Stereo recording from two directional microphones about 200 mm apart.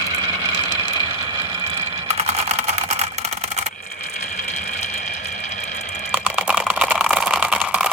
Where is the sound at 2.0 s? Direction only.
30° right (ahead or behind).